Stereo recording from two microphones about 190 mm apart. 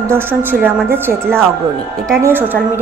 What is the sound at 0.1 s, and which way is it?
A woman's voice, 10° right (ahead or behind).